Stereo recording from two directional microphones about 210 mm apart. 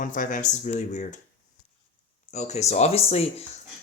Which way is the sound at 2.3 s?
30° left (ahead or behind).